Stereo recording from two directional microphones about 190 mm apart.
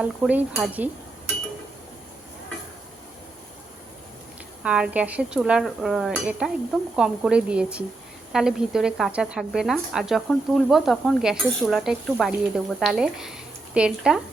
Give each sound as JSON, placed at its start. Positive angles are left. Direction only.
{"t": 0.0, "sound": "dishes", "side_deg": -5}
{"t": 4.6, "sound": "speech", "side_deg": -5}